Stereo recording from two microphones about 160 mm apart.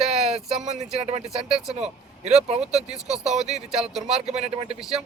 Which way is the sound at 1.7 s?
45° right (ahead or behind).